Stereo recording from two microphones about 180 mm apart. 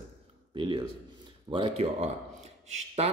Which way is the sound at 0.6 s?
25° right (ahead or behind).